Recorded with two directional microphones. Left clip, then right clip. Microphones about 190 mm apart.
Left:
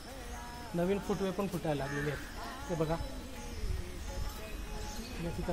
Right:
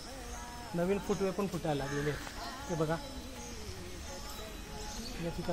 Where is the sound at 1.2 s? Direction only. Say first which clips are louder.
Right 1 dB; 40° right (ahead or behind).